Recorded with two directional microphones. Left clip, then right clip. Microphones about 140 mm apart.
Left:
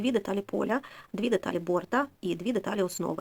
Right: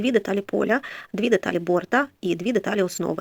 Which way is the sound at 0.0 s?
15° right (ahead or behind).